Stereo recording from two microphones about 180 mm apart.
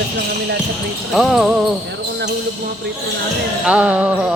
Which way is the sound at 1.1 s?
Centre (ahead or behind).